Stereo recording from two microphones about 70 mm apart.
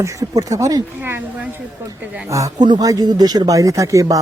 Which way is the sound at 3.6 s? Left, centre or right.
Right.